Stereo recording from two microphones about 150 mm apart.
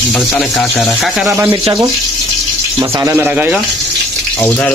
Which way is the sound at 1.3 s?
20° right (ahead or behind).